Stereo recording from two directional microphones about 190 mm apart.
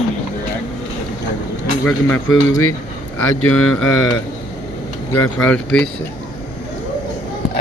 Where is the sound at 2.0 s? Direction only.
90° left.